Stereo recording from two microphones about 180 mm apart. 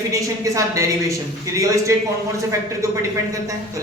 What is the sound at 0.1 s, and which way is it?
Speech, 20° right (ahead or behind).